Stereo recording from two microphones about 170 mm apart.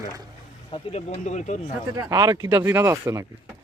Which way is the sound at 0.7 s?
35° left (ahead or behind).